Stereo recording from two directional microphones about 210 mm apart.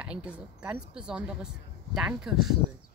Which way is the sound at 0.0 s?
5° right (ahead or behind).